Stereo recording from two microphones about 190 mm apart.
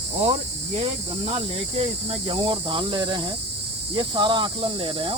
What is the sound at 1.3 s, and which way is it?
Speech, 30° right (ahead or behind).